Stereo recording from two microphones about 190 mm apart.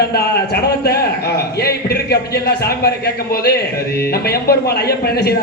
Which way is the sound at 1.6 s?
55° left (ahead or behind).